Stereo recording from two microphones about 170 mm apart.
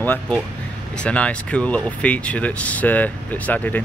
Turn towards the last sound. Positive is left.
turn(degrees=10)  # may be behind; listen again after turning